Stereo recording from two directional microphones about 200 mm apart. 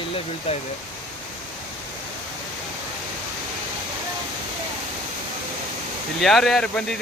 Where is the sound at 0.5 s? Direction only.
30° left (ahead or behind).